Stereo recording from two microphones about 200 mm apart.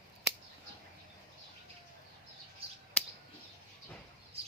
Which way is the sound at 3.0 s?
5° left (ahead or behind).